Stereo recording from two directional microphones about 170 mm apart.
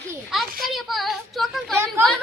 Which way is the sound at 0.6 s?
Centre (ahead or behind).